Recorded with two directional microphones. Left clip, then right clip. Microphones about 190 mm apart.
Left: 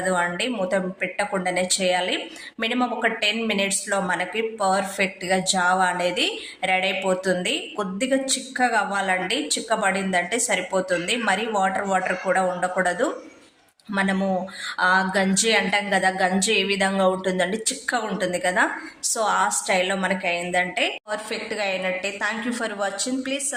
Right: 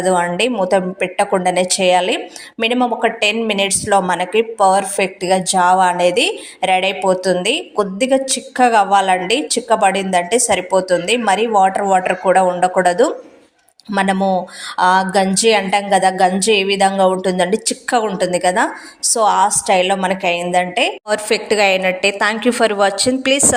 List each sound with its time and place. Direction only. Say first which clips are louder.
0.0 s a woman's voice: right 8 dB; 35° right (ahead or behind)